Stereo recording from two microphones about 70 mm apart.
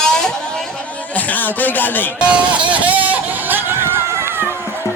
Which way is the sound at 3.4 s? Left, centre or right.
Right.